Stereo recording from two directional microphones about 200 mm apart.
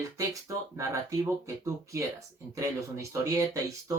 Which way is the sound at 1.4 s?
15° right (ahead or behind).